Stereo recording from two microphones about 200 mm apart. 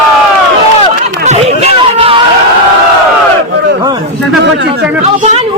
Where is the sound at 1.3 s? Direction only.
30° right (ahead or behind).